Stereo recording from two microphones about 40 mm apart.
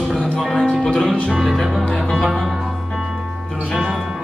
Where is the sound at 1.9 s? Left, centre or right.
Centre.